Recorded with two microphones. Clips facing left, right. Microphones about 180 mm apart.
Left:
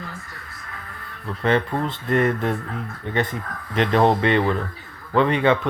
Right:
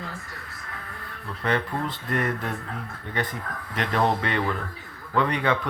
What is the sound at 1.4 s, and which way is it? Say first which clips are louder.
Speech: left 5 dB; 25° left (ahead or behind).